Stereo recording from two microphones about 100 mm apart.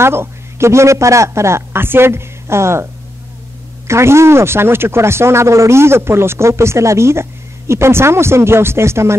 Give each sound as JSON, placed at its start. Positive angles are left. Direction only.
{"t": 0.0, "sound": "a man's voice", "side_deg": -25}